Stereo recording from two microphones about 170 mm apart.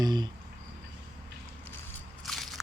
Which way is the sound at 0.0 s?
25° right (ahead or behind).